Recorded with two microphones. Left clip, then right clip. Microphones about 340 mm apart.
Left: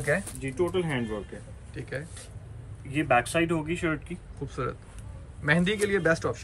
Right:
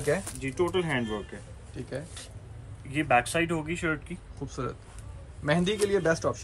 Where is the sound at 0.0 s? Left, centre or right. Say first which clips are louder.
Left 1 dB; centre.